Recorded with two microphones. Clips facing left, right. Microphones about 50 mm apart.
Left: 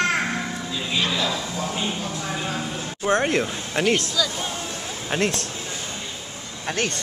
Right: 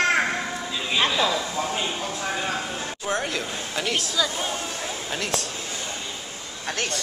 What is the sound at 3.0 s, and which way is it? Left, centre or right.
Speech, left.